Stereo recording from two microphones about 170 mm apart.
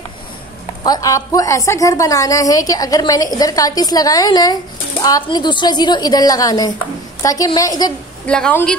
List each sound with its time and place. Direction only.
0.8 s a woman's voice: 20° left (ahead or behind)
8.3 s speech: 5° left (ahead or behind)